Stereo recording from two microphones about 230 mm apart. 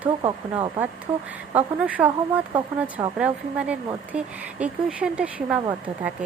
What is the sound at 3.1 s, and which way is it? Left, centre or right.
Speech, centre.